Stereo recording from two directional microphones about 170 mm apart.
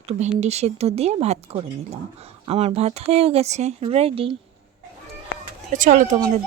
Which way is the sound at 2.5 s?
35° right (ahead or behind).